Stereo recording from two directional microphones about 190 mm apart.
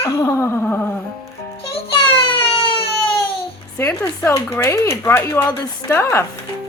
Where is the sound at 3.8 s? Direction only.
15° left (ahead or behind).